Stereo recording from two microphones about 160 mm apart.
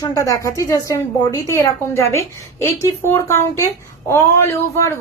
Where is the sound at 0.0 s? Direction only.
20° left (ahead or behind).